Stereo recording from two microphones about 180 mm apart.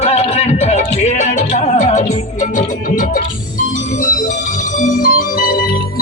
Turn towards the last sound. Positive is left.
turn(degrees=55)  # may be behind; listen again after turning